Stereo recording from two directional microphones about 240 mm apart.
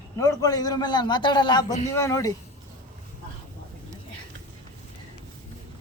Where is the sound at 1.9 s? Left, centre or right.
Centre.